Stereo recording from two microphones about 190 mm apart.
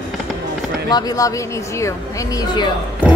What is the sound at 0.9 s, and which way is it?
Speech, 20° left (ahead or behind).